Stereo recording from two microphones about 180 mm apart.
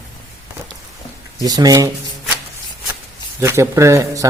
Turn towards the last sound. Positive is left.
turn(degrees=-15)  # may be behind; listen again after turning